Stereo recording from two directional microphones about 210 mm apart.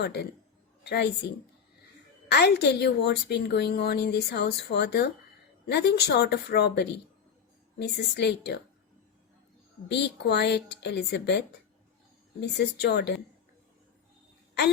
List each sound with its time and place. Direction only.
0.0 s a woman's voice: 50° left (ahead or behind)
2.3 s a woman's voice: 50° left (ahead or behind)
9.9 s a woman's voice: 55° left (ahead or behind)